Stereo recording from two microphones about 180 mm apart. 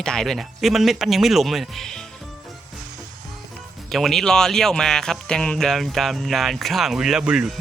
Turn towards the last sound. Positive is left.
turn(degrees=-5)  # may be behind; listen again after turning